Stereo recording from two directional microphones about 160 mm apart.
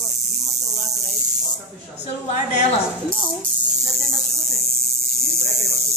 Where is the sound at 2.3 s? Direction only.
45° left (ahead or behind).